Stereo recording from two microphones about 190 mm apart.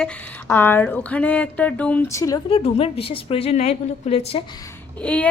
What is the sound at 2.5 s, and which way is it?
A woman's voice, 30° left (ahead or behind).